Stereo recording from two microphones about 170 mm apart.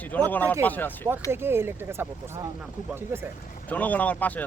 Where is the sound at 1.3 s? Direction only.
15° right (ahead or behind).